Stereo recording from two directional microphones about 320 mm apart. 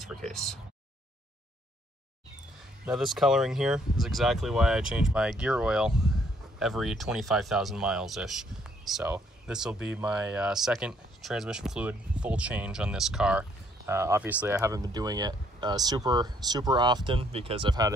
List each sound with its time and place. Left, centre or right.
0.0 s speech: centre
2.8 s speech: centre